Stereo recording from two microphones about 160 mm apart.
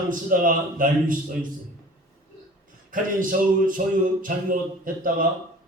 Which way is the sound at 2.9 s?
55° right (ahead or behind).